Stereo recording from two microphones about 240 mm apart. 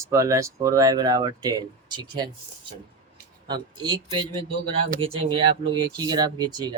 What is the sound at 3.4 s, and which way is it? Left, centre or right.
Speech, centre.